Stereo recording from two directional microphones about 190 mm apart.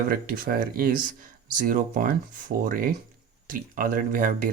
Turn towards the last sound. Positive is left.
turn(degrees=-45)  # may be behind; listen again after turning